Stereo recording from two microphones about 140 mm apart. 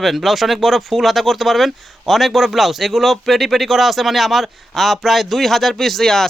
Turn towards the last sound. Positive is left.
turn(degrees=5)  # may be behind; listen again after turning